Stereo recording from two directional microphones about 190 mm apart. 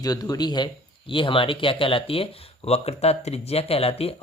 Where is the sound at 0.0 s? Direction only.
20° left (ahead or behind).